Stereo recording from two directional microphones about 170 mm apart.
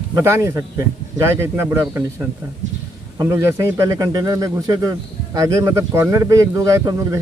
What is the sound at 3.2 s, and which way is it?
A man's voice, 15° right (ahead or behind).